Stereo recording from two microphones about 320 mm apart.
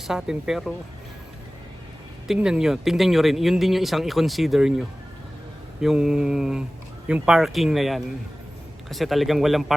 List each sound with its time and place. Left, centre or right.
0.1 s speech: centre
2.2 s speech: centre